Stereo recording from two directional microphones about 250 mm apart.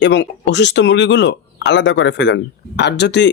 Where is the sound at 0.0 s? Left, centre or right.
Left.